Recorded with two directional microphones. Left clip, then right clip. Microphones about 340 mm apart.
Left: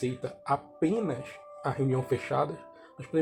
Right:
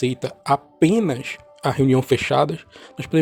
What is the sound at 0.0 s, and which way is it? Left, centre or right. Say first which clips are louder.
Speech: right 9 dB; right.